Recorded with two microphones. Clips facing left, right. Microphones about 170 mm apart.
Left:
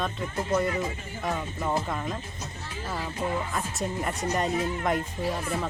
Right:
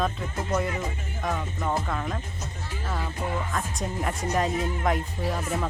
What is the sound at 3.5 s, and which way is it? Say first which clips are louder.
Speech: even; centre (ahead or behind).